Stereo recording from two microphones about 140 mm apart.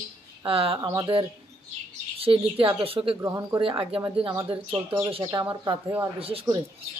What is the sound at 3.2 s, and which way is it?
Speech, 20° right (ahead or behind).